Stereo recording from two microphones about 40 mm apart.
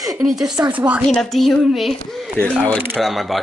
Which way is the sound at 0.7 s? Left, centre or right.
Right.